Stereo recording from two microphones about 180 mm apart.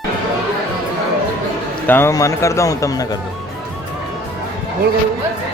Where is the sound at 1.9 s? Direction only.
15° left (ahead or behind).